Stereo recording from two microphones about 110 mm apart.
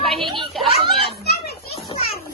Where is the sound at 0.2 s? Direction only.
50° right (ahead or behind).